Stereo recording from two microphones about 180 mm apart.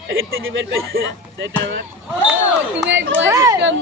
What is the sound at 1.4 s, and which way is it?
Speech, 80° right.